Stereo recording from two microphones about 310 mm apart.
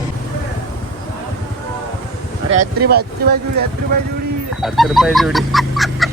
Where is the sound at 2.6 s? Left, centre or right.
Right.